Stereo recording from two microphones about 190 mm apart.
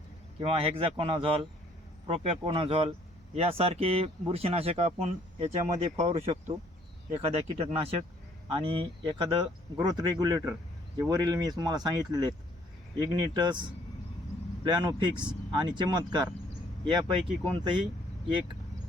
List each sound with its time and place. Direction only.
0.3 s speech: 30° right (ahead or behind)
7.4 s speech: 30° right (ahead or behind)
14.7 s speech: 25° right (ahead or behind)